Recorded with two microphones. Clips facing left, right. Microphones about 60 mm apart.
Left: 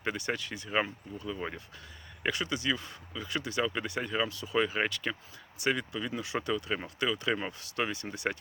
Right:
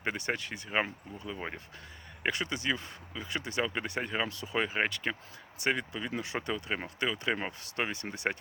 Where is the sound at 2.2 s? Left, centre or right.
Right.